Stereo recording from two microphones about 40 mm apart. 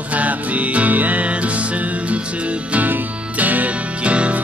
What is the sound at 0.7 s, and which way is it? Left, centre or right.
Music, right.